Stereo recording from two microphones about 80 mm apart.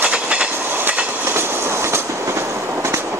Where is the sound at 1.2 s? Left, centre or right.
Right.